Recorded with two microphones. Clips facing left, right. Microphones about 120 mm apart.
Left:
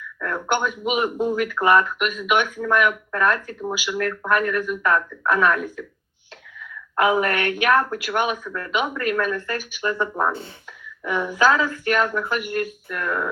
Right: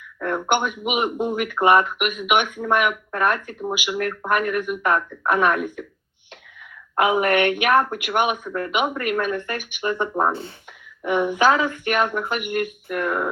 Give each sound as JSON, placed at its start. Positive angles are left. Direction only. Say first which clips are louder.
{"t": 0.2, "sound": "speech", "louder": "right 2 dB", "side_deg": -20}